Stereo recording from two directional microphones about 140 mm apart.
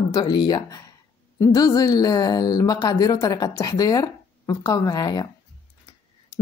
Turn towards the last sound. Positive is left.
turn(degrees=30)  # may be behind; listen again after turning